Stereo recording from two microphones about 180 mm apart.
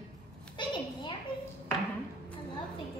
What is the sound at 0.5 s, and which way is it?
Speech, 25° left (ahead or behind).